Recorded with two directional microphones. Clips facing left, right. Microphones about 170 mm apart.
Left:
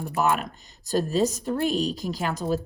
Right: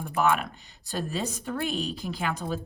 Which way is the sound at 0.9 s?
40° left (ahead or behind).